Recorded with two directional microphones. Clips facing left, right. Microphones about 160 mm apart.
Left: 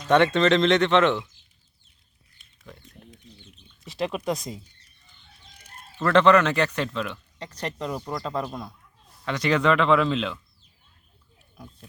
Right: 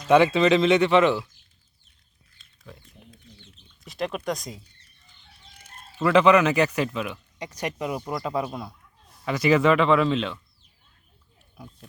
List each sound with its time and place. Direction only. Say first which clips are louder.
0.1 s speech: right 1 dB; 5° right (ahead or behind)
2.6 s a sound: even; 5° right (ahead or behind)
3.8 s speech: left 1 dB; centre (ahead or behind)
6.0 s speech: even; 5° right (ahead or behind)
11.5 s speech: right 1 dB; 10° right (ahead or behind)